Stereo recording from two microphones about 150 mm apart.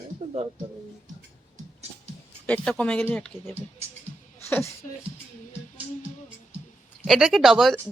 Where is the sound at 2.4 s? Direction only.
10° left (ahead or behind).